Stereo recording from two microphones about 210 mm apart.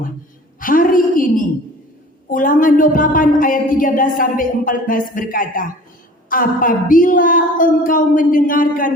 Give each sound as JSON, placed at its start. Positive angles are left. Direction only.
{"t": 0.6, "sound": "a woman's voice", "side_deg": 40}